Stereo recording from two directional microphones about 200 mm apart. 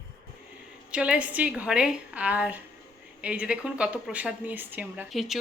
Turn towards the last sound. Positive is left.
turn(degrees=0)  # may be behind; listen again after turning